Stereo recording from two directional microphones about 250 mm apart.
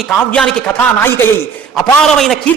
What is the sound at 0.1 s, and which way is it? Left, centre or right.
A man's voice, centre.